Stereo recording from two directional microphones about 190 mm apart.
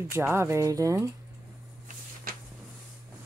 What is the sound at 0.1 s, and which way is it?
Speech, 15° right (ahead or behind).